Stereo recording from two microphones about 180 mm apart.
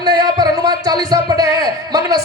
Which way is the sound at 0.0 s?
20° right (ahead or behind).